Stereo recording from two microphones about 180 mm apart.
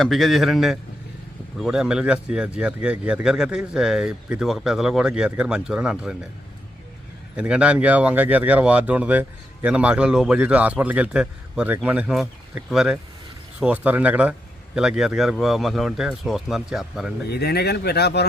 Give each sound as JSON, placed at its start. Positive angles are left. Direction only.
{"t": 0.0, "sound": "speech", "side_deg": 0}
{"t": 7.3, "sound": "speech", "side_deg": -5}
{"t": 17.2, "sound": "speech", "side_deg": 60}